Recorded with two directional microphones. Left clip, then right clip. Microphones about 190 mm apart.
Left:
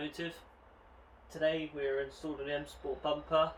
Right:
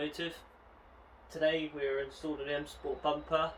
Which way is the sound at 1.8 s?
Centre (ahead or behind).